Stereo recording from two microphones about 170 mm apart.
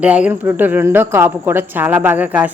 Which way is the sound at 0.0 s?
5° right (ahead or behind).